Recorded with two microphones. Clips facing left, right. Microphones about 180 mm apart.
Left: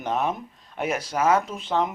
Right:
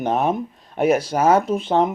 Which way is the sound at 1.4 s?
60° right (ahead or behind).